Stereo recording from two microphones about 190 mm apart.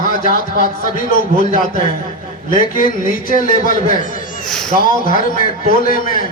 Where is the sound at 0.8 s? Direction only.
45° left (ahead or behind).